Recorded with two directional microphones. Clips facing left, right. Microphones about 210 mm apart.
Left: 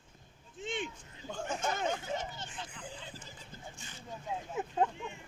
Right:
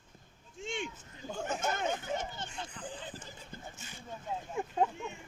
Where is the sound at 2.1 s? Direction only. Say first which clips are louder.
Right 1 dB; 45° right (ahead or behind).